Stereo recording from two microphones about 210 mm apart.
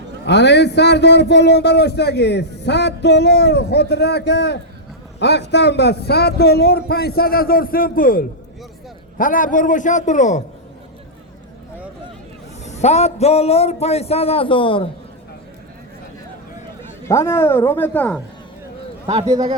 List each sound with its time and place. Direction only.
0.3 s a man's voice: 55° left (ahead or behind); by 10.4 s 35° left (ahead or behind)
12.6 s a man's voice: 30° left (ahead or behind)
17.1 s speech: 15° left (ahead or behind)